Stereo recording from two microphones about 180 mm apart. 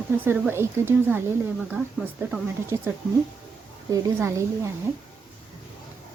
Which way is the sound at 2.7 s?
15° right (ahead or behind).